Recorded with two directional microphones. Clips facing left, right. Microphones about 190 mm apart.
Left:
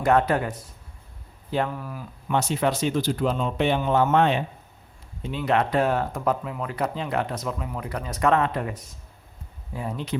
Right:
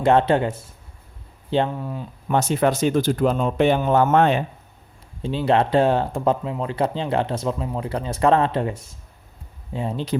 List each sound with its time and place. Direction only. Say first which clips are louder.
0.0 s speech: right 4 dB; 25° right (ahead or behind)
2.2 s speech: right 4 dB; 45° right (ahead or behind)
5.2 s speech: right 4 dB; 30° right (ahead or behind)